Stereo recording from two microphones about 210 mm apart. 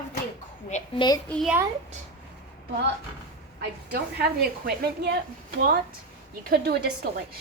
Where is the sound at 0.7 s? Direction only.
35° left (ahead or behind).